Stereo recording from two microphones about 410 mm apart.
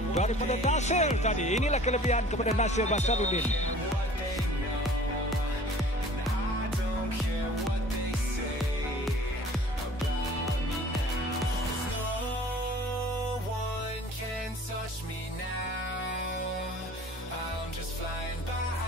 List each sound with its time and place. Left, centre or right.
0.1 s speech: centre